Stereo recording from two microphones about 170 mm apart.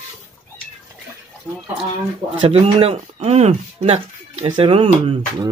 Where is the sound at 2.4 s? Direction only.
35° right (ahead or behind).